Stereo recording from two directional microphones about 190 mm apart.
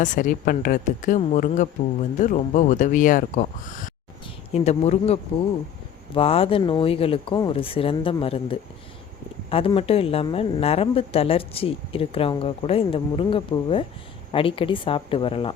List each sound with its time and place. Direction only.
0.0 s a woman's voice: 45° left (ahead or behind); by 15.5 s 30° left (ahead or behind)